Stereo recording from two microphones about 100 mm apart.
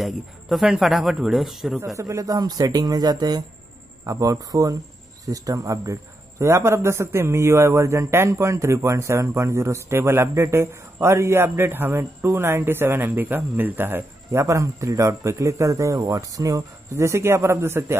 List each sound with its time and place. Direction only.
0.0 s speech: 5° right (ahead or behind)
2.0 s a man's voice: 35° right (ahead or behind)